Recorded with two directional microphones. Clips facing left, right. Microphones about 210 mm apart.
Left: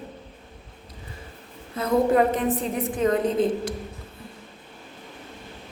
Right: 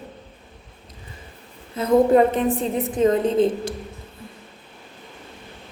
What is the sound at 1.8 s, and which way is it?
A woman's voice, 25° right (ahead or behind).